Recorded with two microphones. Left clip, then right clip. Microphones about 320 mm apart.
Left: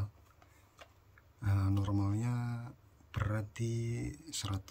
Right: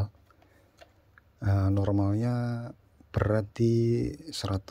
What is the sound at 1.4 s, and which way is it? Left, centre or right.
Speech, centre.